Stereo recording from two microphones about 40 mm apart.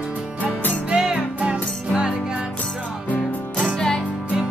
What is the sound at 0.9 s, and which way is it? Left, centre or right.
Music, centre.